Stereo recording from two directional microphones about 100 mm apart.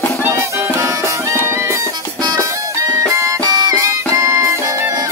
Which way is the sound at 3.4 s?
45° right (ahead or behind).